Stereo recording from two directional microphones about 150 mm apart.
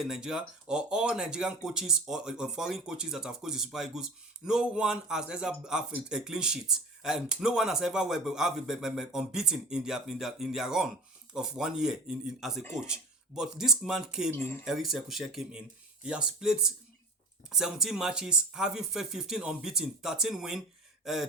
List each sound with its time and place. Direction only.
0.0 s speech: 5° right (ahead or behind)
14.3 s speech: 15° left (ahead or behind)
14.6 s speech: centre (ahead or behind)
21.0 s a sound: centre (ahead or behind)